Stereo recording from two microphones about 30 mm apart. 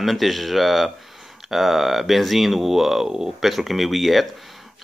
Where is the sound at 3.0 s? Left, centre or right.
Right.